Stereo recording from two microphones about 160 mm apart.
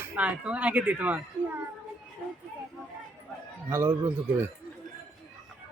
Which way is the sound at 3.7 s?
15° right (ahead or behind).